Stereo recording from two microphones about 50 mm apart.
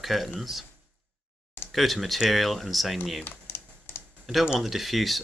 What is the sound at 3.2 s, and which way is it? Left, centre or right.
Typing, left.